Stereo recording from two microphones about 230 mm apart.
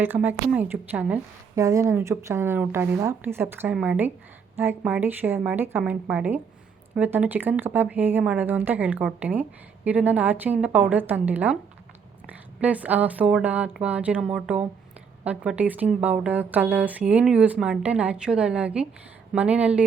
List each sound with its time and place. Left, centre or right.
0.0 s a woman's voice: centre